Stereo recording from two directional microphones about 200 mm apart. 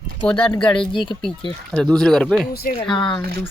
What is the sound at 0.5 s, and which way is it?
Speech, 5° left (ahead or behind).